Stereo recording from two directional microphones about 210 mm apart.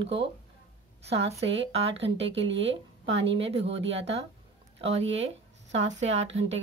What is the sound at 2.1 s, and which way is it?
Speech, 60° right (ahead or behind).